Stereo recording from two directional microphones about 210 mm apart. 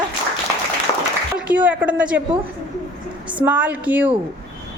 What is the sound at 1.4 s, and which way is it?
Speech, 5° right (ahead or behind).